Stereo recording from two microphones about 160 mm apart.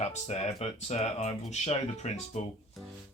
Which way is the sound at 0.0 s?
45° left (ahead or behind).